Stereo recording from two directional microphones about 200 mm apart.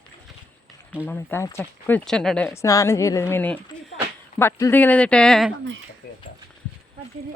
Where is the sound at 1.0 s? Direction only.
10° left (ahead or behind).